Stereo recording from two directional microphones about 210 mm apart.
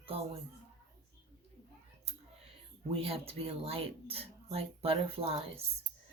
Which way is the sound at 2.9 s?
25° right (ahead or behind).